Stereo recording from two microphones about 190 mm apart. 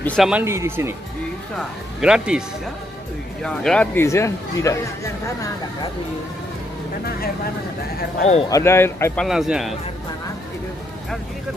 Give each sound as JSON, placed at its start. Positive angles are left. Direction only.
{"t": 0.0, "sound": "speech", "side_deg": 5}
{"t": 0.3, "sound": "speech", "side_deg": -10}
{"t": 2.0, "sound": "speech", "side_deg": -5}
{"t": 3.4, "sound": "speech", "side_deg": 5}
{"t": 8.2, "sound": "speech", "side_deg": 35}
{"t": 8.5, "sound": "speech", "side_deg": 15}